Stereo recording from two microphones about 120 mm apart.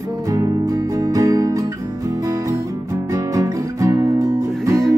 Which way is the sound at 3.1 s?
30° right (ahead or behind).